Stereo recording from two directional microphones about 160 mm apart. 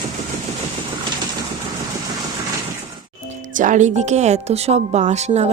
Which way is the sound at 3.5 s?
55° right (ahead or behind).